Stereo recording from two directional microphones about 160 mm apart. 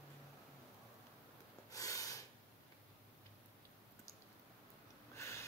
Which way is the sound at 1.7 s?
20° left (ahead or behind).